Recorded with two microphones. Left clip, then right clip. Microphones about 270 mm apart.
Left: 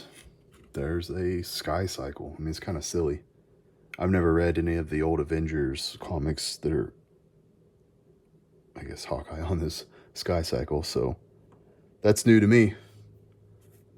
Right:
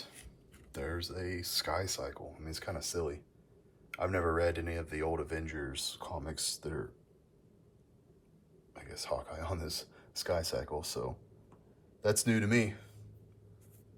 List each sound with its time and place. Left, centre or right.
0.7 s speech: left
8.7 s speech: left